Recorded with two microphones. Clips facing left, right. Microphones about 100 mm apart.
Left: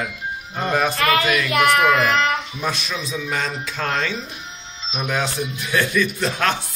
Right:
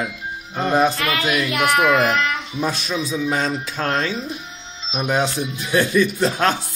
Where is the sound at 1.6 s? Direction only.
5° right (ahead or behind).